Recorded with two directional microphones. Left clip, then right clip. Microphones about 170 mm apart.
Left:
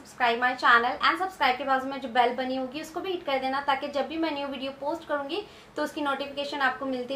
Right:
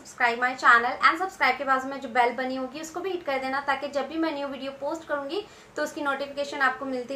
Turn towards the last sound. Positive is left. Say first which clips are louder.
# right 2 dB
turn(degrees=-5)  # may be behind; listen again after turning